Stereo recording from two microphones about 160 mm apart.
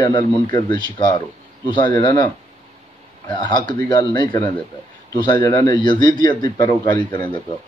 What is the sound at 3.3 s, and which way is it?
A man's voice, 30° left (ahead or behind).